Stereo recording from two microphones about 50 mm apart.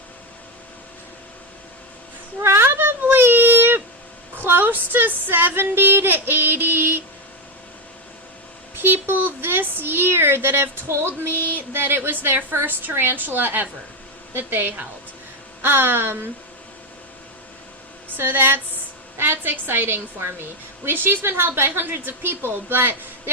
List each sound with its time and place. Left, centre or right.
2.4 s a sound: right
4.4 s speech: right
8.8 s speech: right
11.5 s speech: right
18.2 s speech: right